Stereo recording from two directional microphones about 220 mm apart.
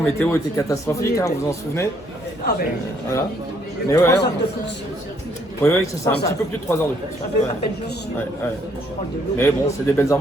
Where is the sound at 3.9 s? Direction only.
15° left (ahead or behind).